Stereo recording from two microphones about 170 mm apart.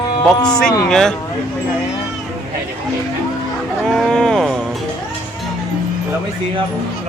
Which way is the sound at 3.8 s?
5° left (ahead or behind).